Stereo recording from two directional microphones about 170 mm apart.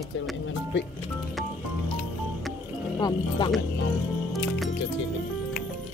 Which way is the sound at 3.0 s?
25° left (ahead or behind).